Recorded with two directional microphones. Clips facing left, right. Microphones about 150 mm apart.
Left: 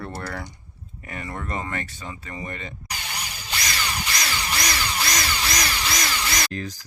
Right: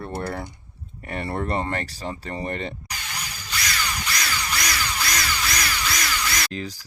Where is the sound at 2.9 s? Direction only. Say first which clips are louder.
Left 1 dB; 30° left (ahead or behind).